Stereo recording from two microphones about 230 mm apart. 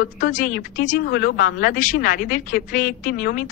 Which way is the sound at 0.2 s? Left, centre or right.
Left.